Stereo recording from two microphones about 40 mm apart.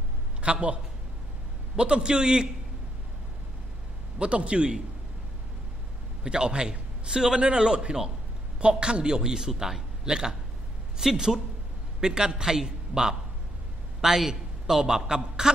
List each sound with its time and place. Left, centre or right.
0.4 s a man's voice: right
1.8 s a man's voice: right
4.2 s a man's voice: right
6.2 s a man's voice: right